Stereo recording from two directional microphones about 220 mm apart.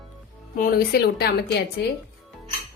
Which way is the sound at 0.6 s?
45° left (ahead or behind).